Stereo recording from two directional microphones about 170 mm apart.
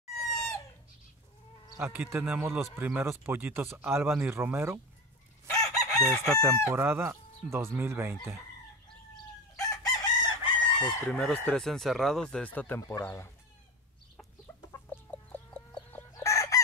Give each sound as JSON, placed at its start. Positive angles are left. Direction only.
{"t": 0.3, "sound": "chicken", "side_deg": 20}
{"t": 1.8, "sound": "speech", "side_deg": -15}
{"t": 5.5, "sound": "chicken", "side_deg": 20}
{"t": 6.7, "sound": "speech", "side_deg": -15}
{"t": 9.6, "sound": "chicken", "side_deg": 25}
{"t": 11.1, "sound": "speech", "side_deg": 5}
{"t": 14.7, "sound": "chicken", "side_deg": 10}